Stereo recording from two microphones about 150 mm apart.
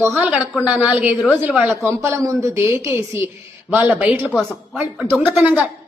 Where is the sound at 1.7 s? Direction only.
20° right (ahead or behind).